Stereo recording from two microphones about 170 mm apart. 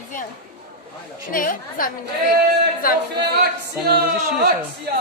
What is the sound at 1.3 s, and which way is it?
Speech, 55° left (ahead or behind).